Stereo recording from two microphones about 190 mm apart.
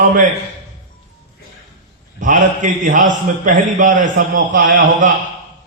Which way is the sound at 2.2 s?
40° right (ahead or behind).